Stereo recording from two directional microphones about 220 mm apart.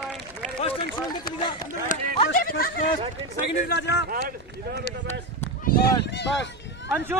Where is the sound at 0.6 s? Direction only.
25° left (ahead or behind).